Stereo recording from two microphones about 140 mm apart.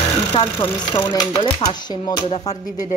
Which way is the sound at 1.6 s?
30° left (ahead or behind).